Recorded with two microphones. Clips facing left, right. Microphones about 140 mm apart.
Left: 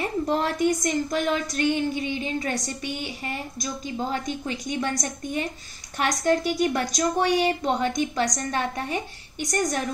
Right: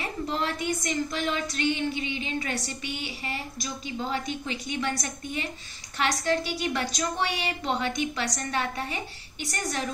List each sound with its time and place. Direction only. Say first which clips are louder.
0.0 s a woman's voice: left 5 dB; 45° left (ahead or behind)
5.9 s a woman's voice: left 3 dB; 45° left (ahead or behind)